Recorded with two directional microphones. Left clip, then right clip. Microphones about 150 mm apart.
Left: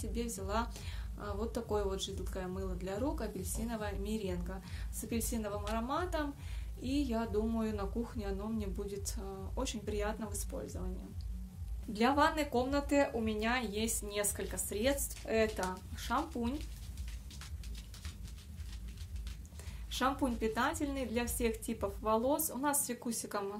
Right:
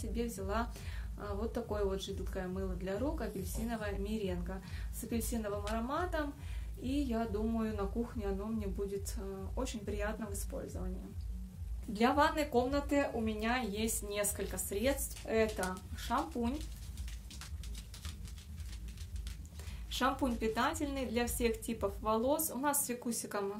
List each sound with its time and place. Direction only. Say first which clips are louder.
0.0 s speech: right 1 dB; 25° left (ahead or behind)
11.9 s a woman's voice: even; 15° left (ahead or behind)
19.9 s a woman's voice: even; 10° left (ahead or behind)